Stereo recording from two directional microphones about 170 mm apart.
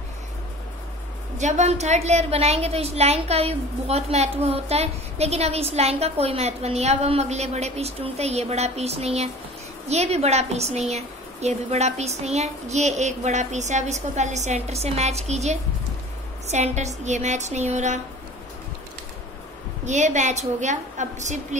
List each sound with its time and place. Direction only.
1.4 s a woman's voice: 40° right (ahead or behind)
19.8 s a woman's voice: 45° right (ahead or behind)